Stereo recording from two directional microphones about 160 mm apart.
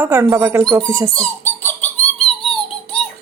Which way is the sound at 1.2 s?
10° left (ahead or behind).